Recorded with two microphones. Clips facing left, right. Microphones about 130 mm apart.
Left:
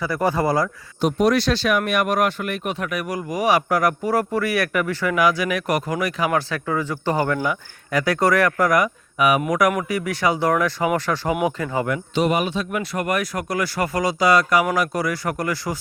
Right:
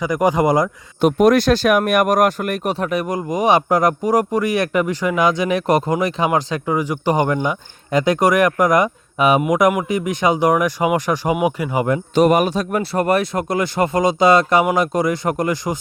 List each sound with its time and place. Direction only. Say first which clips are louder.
0.0 s speech: right 4 dB; 15° right (ahead or behind)
1.0 s speech: right 5 dB; 50° right (ahead or behind)
2.7 s speech: right 5 dB; 30° right (ahead or behind); by 11.9 s 15° right (ahead or behind)
12.1 s speech: right 6 dB; 45° right (ahead or behind); by 15.8 s 20° right (ahead or behind)